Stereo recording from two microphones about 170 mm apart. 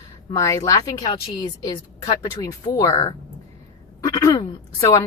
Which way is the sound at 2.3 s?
25° left (ahead or behind).